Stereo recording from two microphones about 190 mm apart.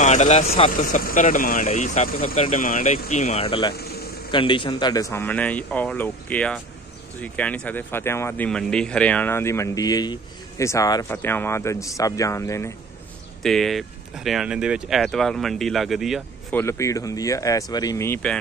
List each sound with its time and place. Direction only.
0.0 s speech: 40° left (ahead or behind); by 12.7 s 15° left (ahead or behind)
13.4 s speech: centre (ahead or behind)
16.5 s speech: 15° left (ahead or behind)